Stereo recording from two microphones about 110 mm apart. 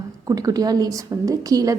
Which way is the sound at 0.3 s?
35° right (ahead or behind).